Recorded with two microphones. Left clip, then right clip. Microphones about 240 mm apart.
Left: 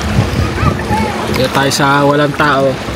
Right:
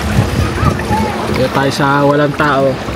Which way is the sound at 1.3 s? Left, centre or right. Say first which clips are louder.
Left 2 dB; centre.